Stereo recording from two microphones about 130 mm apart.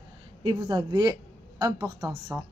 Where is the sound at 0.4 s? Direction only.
35° right (ahead or behind); by 2.4 s 15° right (ahead or behind).